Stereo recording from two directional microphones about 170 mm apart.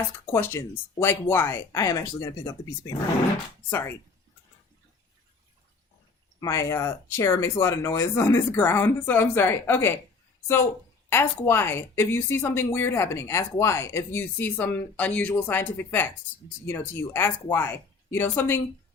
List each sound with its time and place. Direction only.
0.3 s a woman's voice: 15° left (ahead or behind)
6.4 s a woman's voice: 20° left (ahead or behind)
11.1 s a woman's voice: 15° left (ahead or behind)